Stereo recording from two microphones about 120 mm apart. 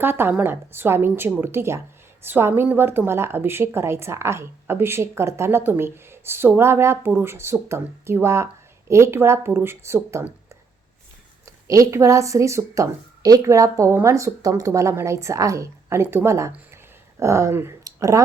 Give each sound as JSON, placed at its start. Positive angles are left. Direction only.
{"t": 0.0, "sound": "a woman's voice", "side_deg": -20}